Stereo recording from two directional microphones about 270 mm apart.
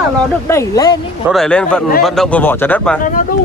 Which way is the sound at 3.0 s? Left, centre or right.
Left.